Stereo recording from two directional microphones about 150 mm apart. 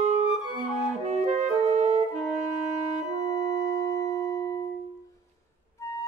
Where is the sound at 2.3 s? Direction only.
50° right (ahead or behind).